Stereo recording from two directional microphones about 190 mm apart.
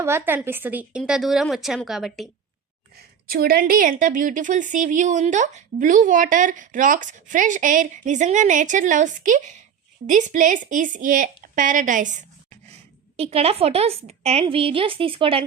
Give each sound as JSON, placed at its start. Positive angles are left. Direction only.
{"t": 0.0, "sound": "a woman's voice", "side_deg": -15}
{"t": 2.9, "sound": "a woman's voice", "side_deg": -50}
{"t": 13.1, "sound": "a woman's voice", "side_deg": -30}